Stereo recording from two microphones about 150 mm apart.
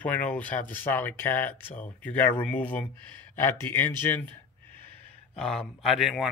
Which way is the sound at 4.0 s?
15° left (ahead or behind).